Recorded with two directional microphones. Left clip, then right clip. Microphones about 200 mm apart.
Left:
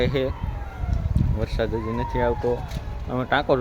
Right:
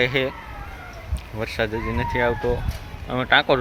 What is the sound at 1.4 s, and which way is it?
Speech, centre (ahead or behind).